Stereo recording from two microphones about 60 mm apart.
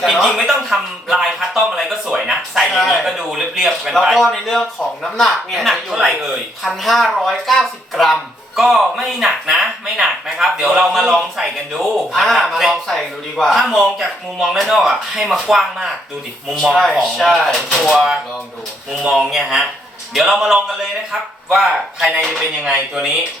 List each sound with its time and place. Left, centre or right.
0.0 s a sound: centre
3.0 s a man's voice: centre
17.9 s speech: centre
19.3 s a man's voice: centre